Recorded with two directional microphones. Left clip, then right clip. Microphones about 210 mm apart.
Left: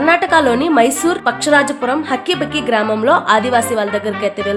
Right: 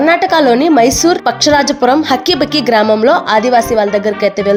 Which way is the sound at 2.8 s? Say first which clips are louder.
Right 3 dB; 15° right (ahead or behind).